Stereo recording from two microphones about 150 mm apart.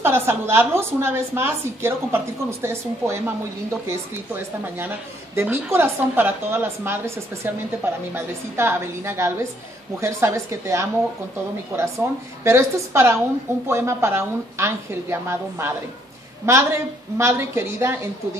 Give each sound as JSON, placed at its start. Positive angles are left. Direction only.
{"t": 0.0, "sound": "a woman's voice", "side_deg": -15}